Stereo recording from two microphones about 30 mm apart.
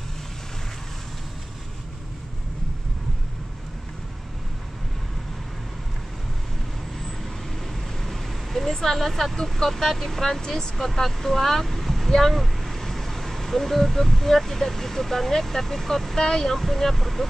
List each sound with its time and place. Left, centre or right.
7.7 s vehicle: centre
8.7 s speech: centre
16.2 s speech: centre
16.5 s speech: centre